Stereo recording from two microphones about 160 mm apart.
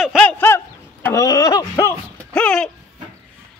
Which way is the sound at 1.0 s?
20° left (ahead or behind).